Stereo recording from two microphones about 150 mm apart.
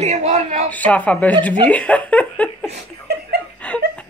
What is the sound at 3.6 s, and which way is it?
Laughter, 10° left (ahead or behind).